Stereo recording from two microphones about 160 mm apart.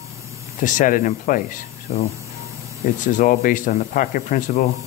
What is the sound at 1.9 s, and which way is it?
Speech, 40° left (ahead or behind).